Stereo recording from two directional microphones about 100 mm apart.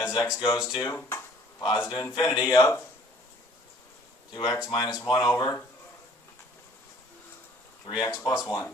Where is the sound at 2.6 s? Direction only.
25° left (ahead or behind).